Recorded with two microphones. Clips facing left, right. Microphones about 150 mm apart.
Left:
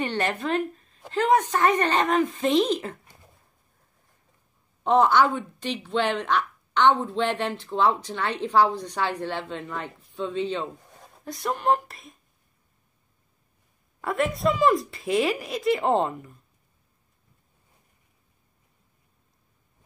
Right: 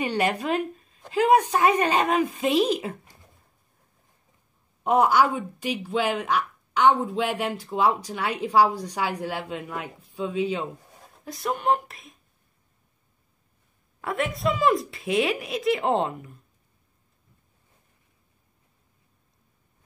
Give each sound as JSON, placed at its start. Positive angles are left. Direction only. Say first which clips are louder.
{"t": 0.0, "sound": "speech", "louder": "right 2 dB", "side_deg": -10}
{"t": 4.8, "sound": "a woman's voice", "louder": "left 1 dB", "side_deg": -10}
{"t": 14.0, "sound": "a woman's voice", "louder": "left 2 dB", "side_deg": 0}